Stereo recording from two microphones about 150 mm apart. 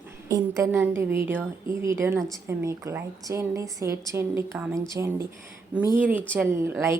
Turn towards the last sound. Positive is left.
turn(degrees=-15)  # may be behind; listen again after turning